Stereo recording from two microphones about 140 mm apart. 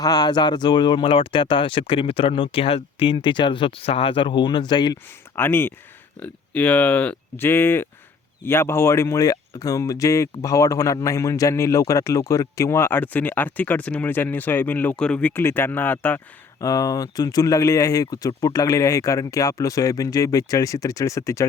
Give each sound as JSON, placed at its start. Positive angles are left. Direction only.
{"t": 0.0, "sound": "speech", "side_deg": 30}
{"t": 5.4, "sound": "speech", "side_deg": 15}
{"t": 16.6, "sound": "speech", "side_deg": 25}